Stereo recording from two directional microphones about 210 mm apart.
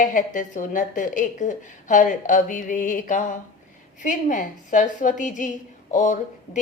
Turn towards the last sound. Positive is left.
turn(degrees=35)  # may be behind; listen again after turning